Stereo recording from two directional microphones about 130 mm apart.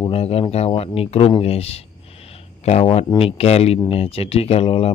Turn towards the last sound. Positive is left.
turn(degrees=50)  # may be behind; listen again after turning